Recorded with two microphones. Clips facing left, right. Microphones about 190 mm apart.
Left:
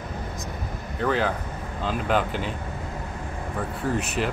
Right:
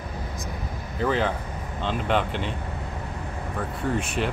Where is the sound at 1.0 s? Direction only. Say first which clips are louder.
Even; centre (ahead or behind).